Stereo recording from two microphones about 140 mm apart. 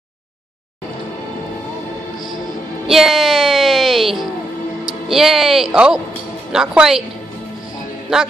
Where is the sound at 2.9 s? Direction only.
Centre (ahead or behind).